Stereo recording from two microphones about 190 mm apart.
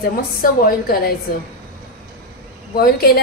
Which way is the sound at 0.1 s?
50° left (ahead or behind).